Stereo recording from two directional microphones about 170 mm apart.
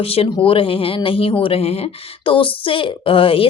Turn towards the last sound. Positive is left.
turn(degrees=30)  # may be behind; listen again after turning